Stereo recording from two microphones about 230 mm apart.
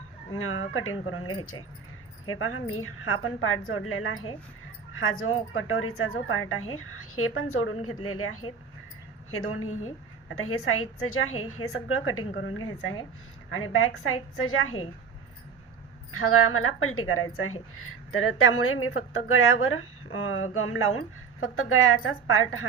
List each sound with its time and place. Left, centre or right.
0.3 s a woman's voice: left
9.5 s a woman's voice: left
16.1 s a woman's voice: left